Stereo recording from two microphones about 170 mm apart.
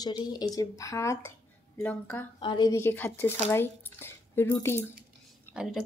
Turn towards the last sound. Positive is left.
turn(degrees=15)  # may be behind; listen again after turning